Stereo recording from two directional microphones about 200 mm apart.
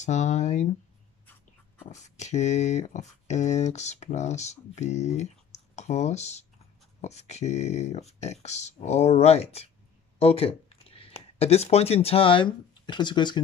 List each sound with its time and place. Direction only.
0.0 s speech: 35° left (ahead or behind)
1.9 s speech: 35° left (ahead or behind)